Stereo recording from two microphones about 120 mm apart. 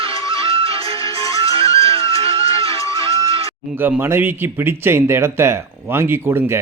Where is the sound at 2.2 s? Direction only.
55° right (ahead or behind).